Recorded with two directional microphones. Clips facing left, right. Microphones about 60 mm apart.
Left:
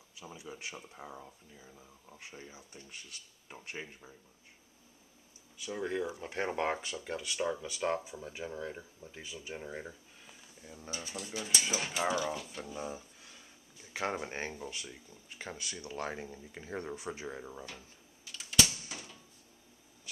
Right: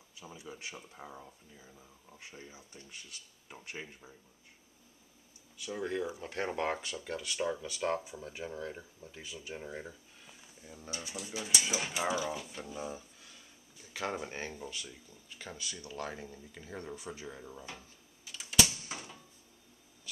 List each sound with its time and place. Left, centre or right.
0.2 s speech: centre
5.8 s speech: centre
9.5 s speech: centre
13.9 s speech: left
18.2 s a sound: centre
18.9 s a sound: centre